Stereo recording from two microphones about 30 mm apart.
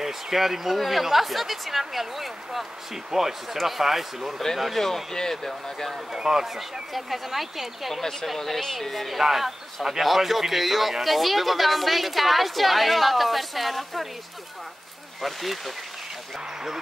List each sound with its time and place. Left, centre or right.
0.0 s a man's voice: centre
4.7 s speech: centre
6.1 s speech: centre
6.4 s a man's voice: centre
7.9 s speech: centre
9.2 s a man's voice: centre
15.2 s a man's voice: centre